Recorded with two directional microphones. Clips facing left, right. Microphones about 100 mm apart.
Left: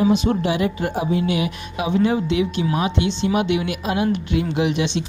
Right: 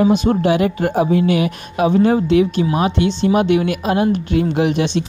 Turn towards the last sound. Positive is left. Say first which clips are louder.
# right 4 dB
turn(degrees=-45)  # may be behind; listen again after turning